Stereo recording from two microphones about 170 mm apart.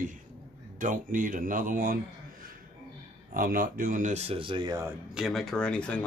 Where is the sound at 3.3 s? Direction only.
55° right (ahead or behind); by 4.9 s 20° right (ahead or behind).